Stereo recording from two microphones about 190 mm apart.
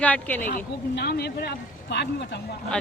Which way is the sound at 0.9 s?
60° left (ahead or behind).